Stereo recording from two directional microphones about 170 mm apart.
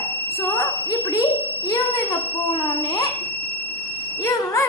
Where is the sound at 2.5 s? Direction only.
30° left (ahead or behind).